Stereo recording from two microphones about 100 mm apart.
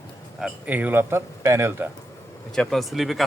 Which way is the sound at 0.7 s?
15° right (ahead or behind).